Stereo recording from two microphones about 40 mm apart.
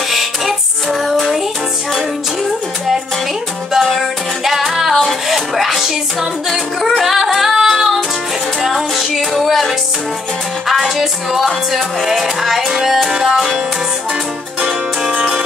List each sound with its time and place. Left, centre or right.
0.1 s music: centre
3.8 s music: centre